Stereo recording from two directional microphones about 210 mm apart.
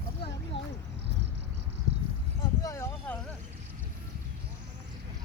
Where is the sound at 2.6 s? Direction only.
15° left (ahead or behind).